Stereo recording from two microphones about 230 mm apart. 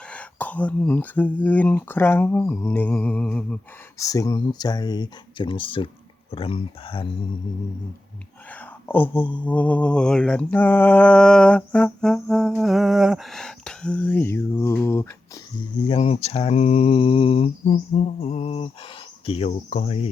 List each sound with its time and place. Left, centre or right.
0.1 s speech: centre; by 5.9 s left
6.3 s cricket: left
8.9 s mantra: centre
15.9 s mantra: left
19.2 s cricket: left